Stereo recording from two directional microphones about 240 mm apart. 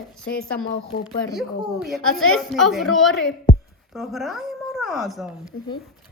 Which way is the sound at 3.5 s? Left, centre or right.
Left.